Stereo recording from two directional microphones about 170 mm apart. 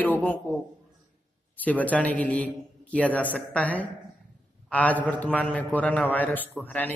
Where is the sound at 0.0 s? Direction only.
10° left (ahead or behind).